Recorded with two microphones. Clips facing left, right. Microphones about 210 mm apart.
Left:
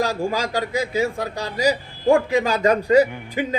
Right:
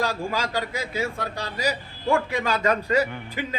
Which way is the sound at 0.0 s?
45° left (ahead or behind).